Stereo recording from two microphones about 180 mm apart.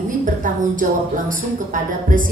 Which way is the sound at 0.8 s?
45° right (ahead or behind).